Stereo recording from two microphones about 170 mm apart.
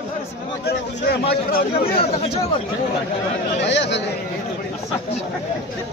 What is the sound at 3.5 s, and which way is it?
Speech, 90° left.